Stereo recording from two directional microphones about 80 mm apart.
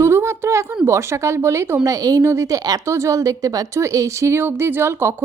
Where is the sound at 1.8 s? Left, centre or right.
Right.